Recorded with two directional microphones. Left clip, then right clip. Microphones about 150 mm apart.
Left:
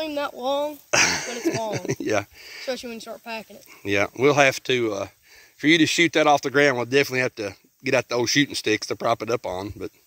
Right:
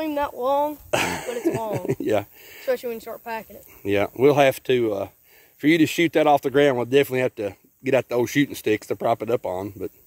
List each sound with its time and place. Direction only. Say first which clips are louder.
0.0 s speech: right 2 dB; 15° right (ahead or behind)
0.8 s speech: left 3 dB; 40° right (ahead or behind)
2.6 s speech: right 5 dB; 20° right (ahead or behind)
3.8 s speech: right 1 dB; 35° right (ahead or behind)